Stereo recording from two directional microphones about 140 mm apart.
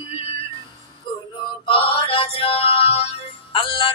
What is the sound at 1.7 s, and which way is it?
Music, 40° left (ahead or behind).